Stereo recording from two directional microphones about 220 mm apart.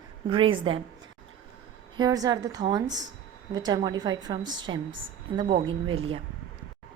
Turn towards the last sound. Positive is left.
turn(degrees=-20)  # may be behind; listen again after turning